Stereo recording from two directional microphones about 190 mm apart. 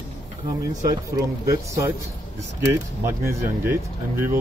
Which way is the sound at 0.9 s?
20° right (ahead or behind).